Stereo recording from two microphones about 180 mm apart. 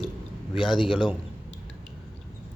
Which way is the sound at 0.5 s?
25° left (ahead or behind).